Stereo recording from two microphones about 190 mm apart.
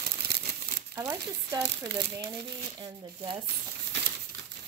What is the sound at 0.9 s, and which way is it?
Speech, 15° right (ahead or behind).